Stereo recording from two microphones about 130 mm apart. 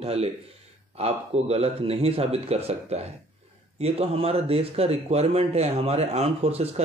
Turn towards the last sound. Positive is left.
turn(degrees=-50)  # may be behind; listen again after turning